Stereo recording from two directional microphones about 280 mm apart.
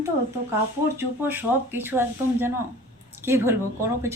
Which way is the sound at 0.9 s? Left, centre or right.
Centre.